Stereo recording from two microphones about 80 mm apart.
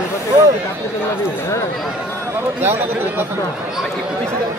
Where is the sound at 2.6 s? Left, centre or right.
Right.